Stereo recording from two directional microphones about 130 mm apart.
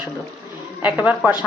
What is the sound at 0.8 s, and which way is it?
Speech, 10° right (ahead or behind).